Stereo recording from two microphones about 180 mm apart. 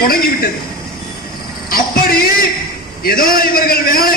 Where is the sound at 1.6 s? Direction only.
55° left (ahead or behind).